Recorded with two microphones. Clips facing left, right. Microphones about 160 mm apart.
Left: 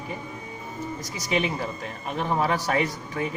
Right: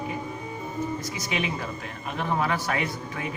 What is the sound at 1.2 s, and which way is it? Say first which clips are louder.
Speech: left 7 dB; 40° left (ahead or behind).